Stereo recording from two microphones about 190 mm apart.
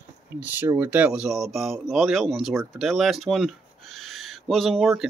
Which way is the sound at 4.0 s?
Centre (ahead or behind).